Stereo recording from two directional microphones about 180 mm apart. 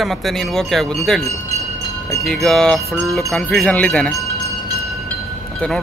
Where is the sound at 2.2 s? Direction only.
Centre (ahead or behind).